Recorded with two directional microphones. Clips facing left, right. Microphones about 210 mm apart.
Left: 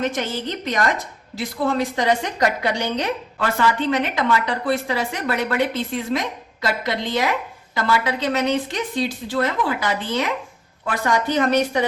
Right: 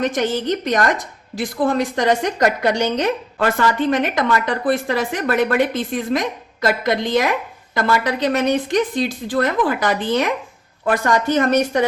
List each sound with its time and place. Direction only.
0.2 s a woman's voice: 50° right (ahead or behind)